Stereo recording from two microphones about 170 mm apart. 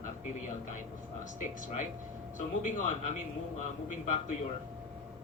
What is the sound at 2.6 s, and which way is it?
Speech, 45° left (ahead or behind).